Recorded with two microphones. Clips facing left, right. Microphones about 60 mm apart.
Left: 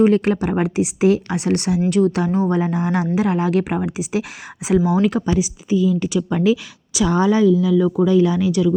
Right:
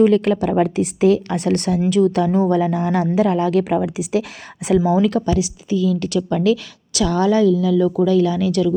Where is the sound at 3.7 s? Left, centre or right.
Left.